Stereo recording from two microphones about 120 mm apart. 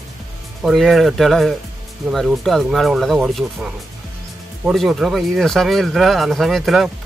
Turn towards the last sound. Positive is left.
turn(degrees=0)  # may be behind; listen again after turning